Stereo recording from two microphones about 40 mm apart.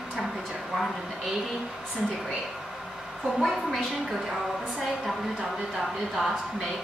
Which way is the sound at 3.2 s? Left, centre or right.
Centre.